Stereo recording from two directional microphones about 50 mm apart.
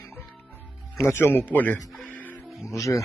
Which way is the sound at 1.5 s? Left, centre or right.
Left.